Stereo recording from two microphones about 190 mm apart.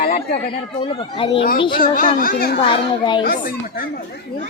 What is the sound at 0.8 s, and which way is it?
Speech, 25° left (ahead or behind).